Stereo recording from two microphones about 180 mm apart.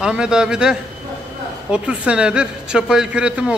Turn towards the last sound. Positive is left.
turn(degrees=-5)  # may be behind; listen again after turning